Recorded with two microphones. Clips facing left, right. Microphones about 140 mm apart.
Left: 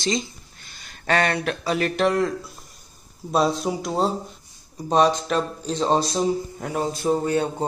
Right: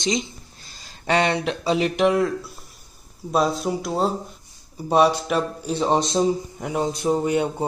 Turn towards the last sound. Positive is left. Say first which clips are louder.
# right 1 dB
turn(degrees=-15)  # may be behind; listen again after turning